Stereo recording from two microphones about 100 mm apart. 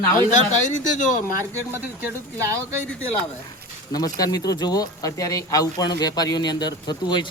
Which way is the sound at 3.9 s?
40° left (ahead or behind).